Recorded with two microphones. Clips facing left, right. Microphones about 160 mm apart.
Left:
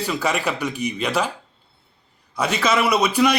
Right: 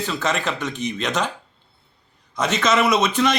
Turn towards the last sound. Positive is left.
turn(degrees=10)  # may be behind; listen again after turning